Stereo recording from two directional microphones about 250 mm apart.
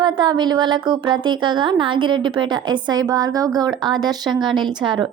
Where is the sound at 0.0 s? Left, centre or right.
Centre.